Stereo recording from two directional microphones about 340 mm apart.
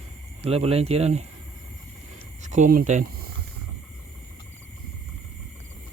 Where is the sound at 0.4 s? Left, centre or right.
Centre.